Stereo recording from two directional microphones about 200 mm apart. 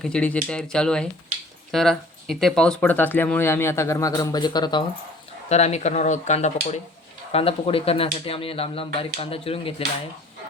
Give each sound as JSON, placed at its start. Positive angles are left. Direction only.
{"t": 0.0, "sound": "speech", "side_deg": 5}
{"t": 5.5, "sound": "speech", "side_deg": 35}